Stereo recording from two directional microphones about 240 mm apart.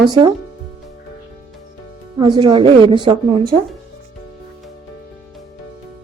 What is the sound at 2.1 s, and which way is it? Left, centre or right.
A woman's voice, centre.